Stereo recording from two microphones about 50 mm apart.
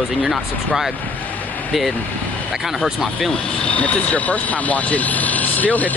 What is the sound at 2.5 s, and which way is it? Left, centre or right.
Speech, centre.